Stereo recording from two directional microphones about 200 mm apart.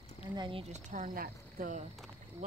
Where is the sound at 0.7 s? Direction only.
40° right (ahead or behind).